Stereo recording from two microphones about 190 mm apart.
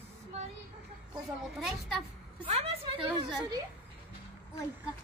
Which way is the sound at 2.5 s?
25° right (ahead or behind).